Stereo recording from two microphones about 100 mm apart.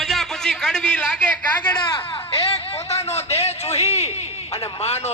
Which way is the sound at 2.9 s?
90° left.